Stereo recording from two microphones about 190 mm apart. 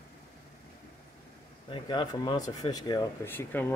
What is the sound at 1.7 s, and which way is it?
Speech, 25° left (ahead or behind).